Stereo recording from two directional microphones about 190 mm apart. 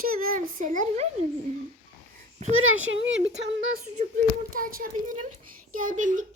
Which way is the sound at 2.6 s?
90° right.